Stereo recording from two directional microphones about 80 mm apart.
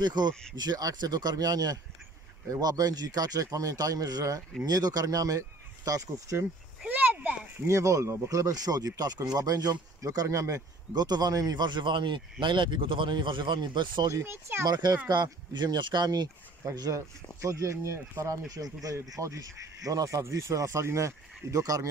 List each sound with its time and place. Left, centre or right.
0.0 s speech: right
6.9 s a sound: right
7.6 s speech: right
10.2 s speech: right
10.9 s speech: right
14.2 s speech: right
14.7 s speech: right
16.6 s speech: right
18.3 s speech: right